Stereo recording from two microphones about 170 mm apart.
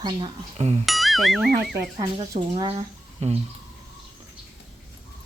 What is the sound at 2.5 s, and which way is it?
Speech, 35° right (ahead or behind).